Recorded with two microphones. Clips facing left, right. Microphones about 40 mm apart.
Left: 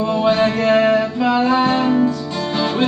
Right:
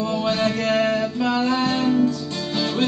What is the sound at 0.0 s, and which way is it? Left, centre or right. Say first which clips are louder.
Music: left 6 dB; centre.